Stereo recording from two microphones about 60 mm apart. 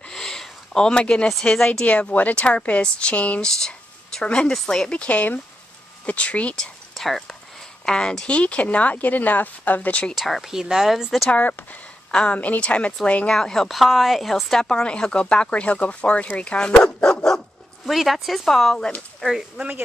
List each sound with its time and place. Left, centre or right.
0.1 s a sound: centre
1.4 s speech: centre
1.7 s speech: left
6.5 s speech: centre
10.1 s speech: centre
11.2 s speech: left
13.3 s speech: centre
13.7 s speech: centre
17.8 s speech: centre